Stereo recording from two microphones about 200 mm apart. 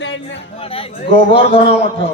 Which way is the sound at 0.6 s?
30° left (ahead or behind).